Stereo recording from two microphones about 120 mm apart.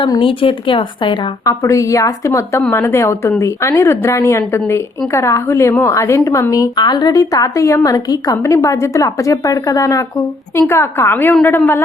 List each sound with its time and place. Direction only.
0.0 s a woman's voice: 45° left (ahead or behind)
1.5 s a woman's voice: 25° left (ahead or behind)